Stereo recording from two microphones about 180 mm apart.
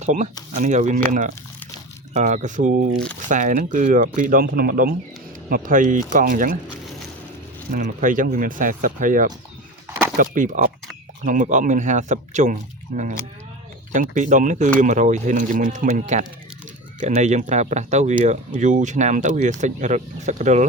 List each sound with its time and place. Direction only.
0.0 s speech: 45° right (ahead or behind)
2.9 s speech: 5° left (ahead or behind)
3.2 s speech: 45° right (ahead or behind)
7.7 s speech: 45° right (ahead or behind)
9.9 s a sound: 10° right (ahead or behind)
10.2 s speech: 45° right (ahead or behind)
13.9 s speech: 45° right (ahead or behind)